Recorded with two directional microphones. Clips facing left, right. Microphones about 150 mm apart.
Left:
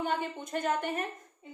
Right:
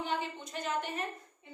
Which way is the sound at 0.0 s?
50° left (ahead or behind).